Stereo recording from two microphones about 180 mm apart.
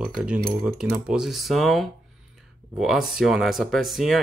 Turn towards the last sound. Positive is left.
turn(degrees=0)  # may be behind; listen again after turning